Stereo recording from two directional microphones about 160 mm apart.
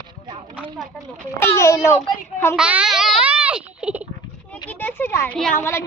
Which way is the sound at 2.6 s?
5° right (ahead or behind).